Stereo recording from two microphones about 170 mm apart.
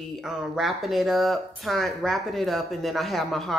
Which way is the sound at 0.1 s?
Centre (ahead or behind).